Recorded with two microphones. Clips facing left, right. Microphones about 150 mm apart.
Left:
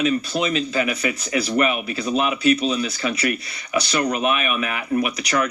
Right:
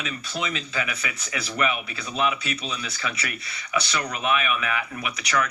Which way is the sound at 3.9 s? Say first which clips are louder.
Left 8 dB; 40° left (ahead or behind).